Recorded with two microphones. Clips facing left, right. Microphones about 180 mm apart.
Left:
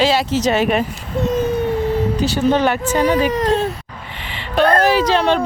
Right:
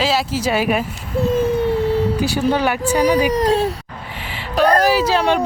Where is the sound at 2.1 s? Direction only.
10° right (ahead or behind).